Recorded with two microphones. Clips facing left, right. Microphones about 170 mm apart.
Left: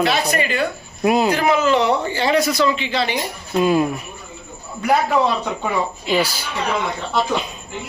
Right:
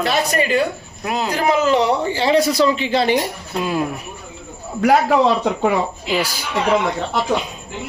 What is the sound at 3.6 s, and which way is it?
Speech, centre (ahead or behind).